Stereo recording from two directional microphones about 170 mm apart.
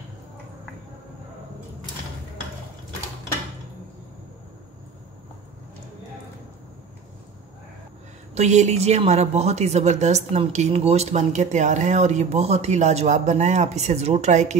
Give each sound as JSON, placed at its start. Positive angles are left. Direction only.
{"t": 8.4, "sound": "speech", "side_deg": -40}